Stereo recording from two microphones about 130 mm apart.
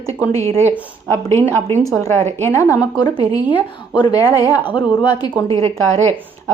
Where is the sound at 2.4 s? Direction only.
25° left (ahead or behind).